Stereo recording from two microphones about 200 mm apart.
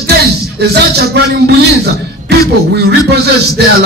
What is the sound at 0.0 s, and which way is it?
Music, 55° right (ahead or behind).